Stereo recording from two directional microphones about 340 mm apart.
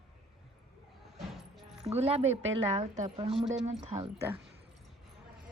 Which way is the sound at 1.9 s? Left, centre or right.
Centre.